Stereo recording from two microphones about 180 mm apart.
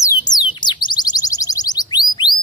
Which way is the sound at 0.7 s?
20° left (ahead or behind).